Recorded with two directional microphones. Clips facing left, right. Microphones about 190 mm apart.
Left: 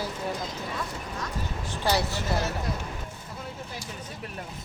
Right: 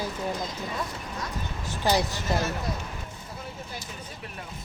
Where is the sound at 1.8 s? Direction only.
15° right (ahead or behind).